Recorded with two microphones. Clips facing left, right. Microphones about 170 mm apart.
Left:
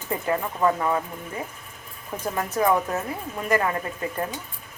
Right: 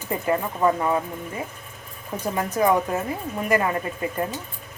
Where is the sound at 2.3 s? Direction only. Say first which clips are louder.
Right 2 dB; 15° right (ahead or behind).